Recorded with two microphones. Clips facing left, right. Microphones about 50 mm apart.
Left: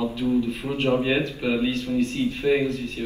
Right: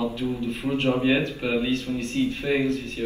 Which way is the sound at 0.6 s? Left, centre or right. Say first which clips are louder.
Right 3 dB; centre.